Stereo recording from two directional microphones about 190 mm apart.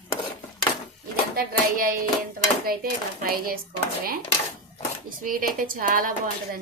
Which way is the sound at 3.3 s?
50° right (ahead or behind).